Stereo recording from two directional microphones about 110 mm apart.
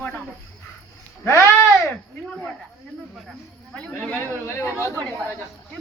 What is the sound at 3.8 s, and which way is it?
Snake, 10° left (ahead or behind).